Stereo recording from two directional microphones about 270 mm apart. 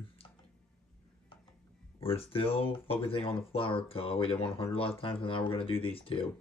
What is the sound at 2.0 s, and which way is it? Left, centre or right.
Speech, left.